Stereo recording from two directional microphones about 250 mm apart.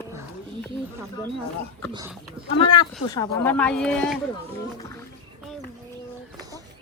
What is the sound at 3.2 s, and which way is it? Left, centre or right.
Speech, centre.